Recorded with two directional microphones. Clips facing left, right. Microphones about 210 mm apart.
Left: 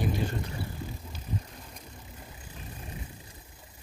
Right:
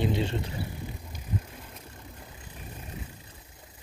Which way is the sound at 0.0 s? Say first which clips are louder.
Right 3 dB; 25° right (ahead or behind).